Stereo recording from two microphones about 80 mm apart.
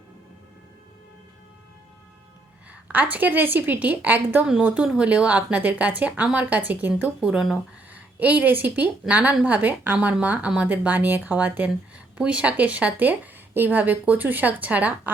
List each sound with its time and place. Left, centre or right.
2.9 s a woman's voice: right